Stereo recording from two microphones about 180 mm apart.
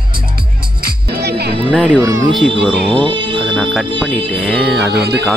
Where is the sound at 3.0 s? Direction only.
25° right (ahead or behind).